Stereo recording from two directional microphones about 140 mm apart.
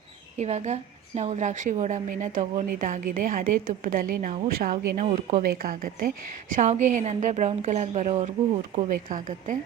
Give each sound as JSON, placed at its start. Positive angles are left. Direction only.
{"t": 0.3, "sound": "a woman's voice", "side_deg": -50}
{"t": 5.4, "sound": "a woman's voice", "side_deg": -90}
{"t": 6.6, "sound": "a woman's voice", "side_deg": -60}
{"t": 8.9, "sound": "speech", "side_deg": -70}